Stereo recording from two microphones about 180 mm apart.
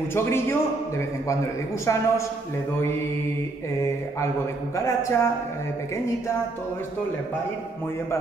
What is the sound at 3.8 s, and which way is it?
A man's voice, 15° left (ahead or behind).